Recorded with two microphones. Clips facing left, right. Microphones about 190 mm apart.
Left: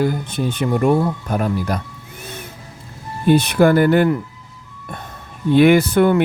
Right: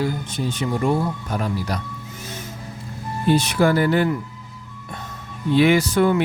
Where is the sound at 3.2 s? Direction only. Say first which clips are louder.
Left 5 dB; 60° left (ahead or behind).